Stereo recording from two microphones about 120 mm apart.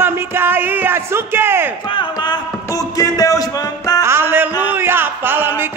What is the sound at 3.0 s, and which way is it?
Music, 30° left (ahead or behind).